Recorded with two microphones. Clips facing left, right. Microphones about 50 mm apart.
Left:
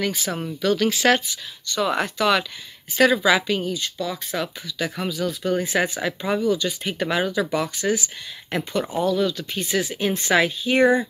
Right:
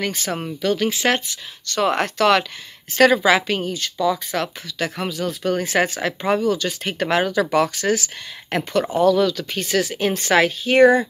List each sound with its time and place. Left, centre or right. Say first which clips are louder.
0.1 s speech: right 1 dB; right
0.5 s speech: even; right
0.7 s speech: left 3 dB; right
1.3 s speech: right 2 dB; right
3.8 s speech: right 7 dB; right
9.0 s speech: right 6 dB; right
9.7 s speech: right 3 dB; right